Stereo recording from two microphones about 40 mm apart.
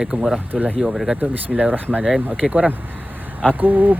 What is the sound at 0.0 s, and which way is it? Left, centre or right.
Speech, right.